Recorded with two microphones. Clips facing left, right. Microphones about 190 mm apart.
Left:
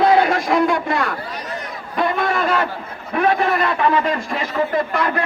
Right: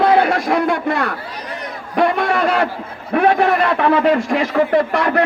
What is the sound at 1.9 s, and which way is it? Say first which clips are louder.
Speech: right 4 dB; 70° right (ahead or behind).